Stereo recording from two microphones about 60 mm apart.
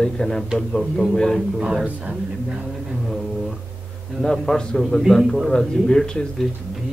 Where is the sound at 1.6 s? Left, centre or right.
Centre.